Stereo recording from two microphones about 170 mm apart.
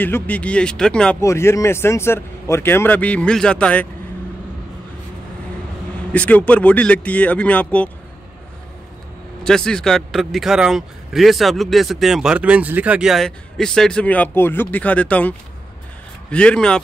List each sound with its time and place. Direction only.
0.0 s a man's voice: 10° left (ahead or behind)
1.2 s a man's voice: 15° left (ahead or behind)
6.1 s a man's voice: 10° left (ahead or behind)
9.4 s speech: 5° left (ahead or behind)